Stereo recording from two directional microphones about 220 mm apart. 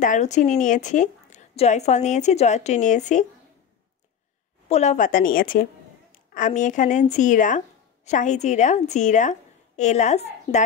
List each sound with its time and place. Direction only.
0.0 s a woman's voice: 35° left (ahead or behind)
4.6 s a woman's voice: 30° left (ahead or behind)